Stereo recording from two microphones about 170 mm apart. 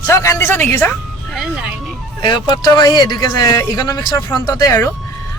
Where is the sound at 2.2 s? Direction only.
25° left (ahead or behind).